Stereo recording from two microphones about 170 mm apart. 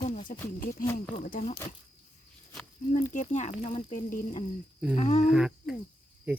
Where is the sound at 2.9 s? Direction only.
45° left (ahead or behind).